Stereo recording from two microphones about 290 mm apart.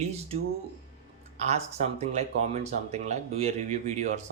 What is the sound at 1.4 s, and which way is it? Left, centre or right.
Speech, right.